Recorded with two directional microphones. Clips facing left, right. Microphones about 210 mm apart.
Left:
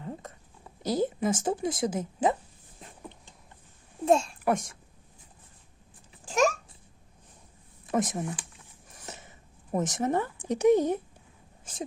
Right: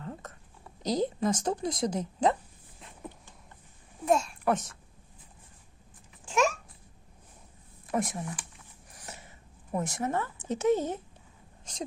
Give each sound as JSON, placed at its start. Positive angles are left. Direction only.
{"t": 0.0, "sound": "a sound", "side_deg": 15}
{"t": 0.8, "sound": "a woman's voice", "side_deg": 5}
{"t": 4.0, "sound": "a child's voice", "side_deg": 30}
{"t": 4.4, "sound": "a woman's voice", "side_deg": 10}
{"t": 6.2, "sound": "babbling", "side_deg": 40}
{"t": 7.9, "sound": "speech", "side_deg": 20}
{"t": 8.9, "sound": "a sound", "side_deg": 20}
{"t": 9.8, "sound": "a woman's voice", "side_deg": 20}